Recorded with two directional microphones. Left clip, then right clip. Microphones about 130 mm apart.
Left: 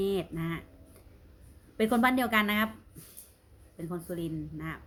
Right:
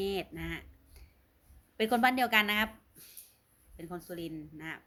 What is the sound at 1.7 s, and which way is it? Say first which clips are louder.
Speech: left 1 dB; 20° left (ahead or behind).